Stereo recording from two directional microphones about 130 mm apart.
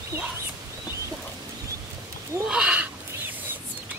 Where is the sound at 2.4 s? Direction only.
10° right (ahead or behind).